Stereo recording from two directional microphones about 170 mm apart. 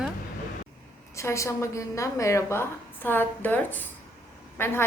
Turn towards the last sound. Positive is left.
turn(degrees=15)  # may be behind; listen again after turning